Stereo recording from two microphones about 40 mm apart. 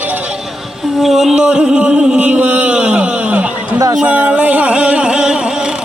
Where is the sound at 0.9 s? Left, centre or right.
Centre.